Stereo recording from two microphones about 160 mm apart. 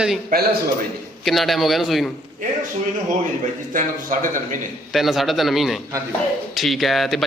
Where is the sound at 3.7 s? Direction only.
55° right (ahead or behind).